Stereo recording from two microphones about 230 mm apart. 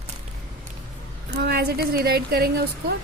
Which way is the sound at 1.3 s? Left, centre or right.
Right.